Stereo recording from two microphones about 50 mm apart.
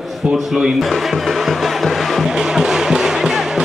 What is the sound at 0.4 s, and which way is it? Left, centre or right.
Speech, centre.